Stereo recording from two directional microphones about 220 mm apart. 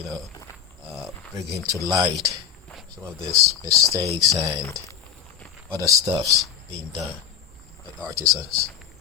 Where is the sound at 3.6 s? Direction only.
15° right (ahead or behind).